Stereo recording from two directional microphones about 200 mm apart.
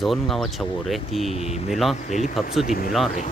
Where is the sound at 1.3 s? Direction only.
30° left (ahead or behind).